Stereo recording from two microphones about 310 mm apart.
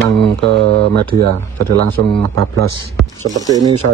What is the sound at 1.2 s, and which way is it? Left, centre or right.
Speech, right.